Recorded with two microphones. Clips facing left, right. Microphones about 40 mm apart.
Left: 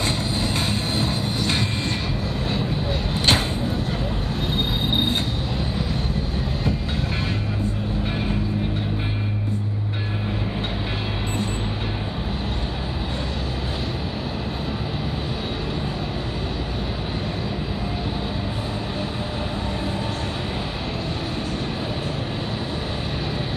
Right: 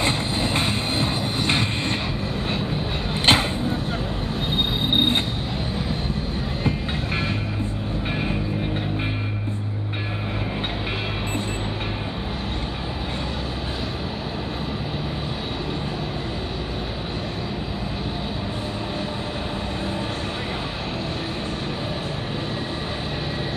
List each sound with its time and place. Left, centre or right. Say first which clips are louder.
0.0 s music: right 1 dB; right
3.3 s vehicle: right 2 dB; right